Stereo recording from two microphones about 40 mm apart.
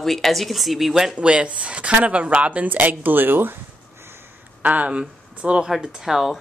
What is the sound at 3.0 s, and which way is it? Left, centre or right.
Speech, right.